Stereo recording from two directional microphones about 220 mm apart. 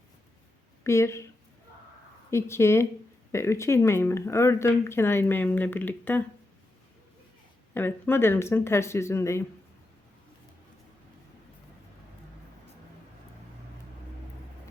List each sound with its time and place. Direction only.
0.9 s speech: 10° left (ahead or behind)
2.3 s speech: 10° left (ahead or behind)
7.7 s speech: 10° left (ahead or behind)